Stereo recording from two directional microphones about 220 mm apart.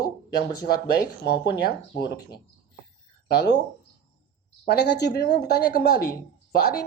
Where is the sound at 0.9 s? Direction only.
50° left (ahead or behind).